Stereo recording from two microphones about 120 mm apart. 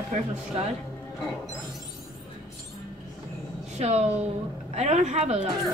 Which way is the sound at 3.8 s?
65° right (ahead or behind).